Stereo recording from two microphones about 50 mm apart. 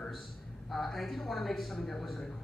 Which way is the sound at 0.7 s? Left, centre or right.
Centre.